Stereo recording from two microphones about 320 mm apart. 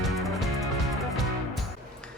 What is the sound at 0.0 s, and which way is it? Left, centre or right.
Music, centre.